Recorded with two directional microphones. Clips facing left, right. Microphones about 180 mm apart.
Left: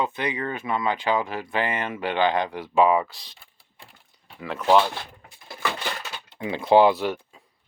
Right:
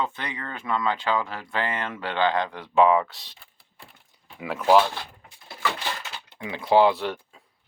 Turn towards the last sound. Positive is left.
turn(degrees=10)  # may be behind; listen again after turning